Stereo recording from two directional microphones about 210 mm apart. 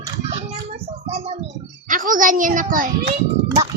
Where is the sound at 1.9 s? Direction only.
40° right (ahead or behind).